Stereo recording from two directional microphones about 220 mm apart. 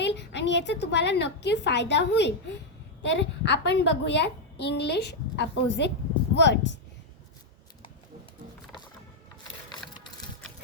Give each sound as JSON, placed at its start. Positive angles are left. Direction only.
{"t": 0.0, "sound": "a child's voice", "side_deg": 55}